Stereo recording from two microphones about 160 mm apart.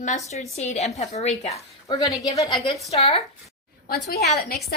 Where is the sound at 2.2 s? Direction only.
25° left (ahead or behind).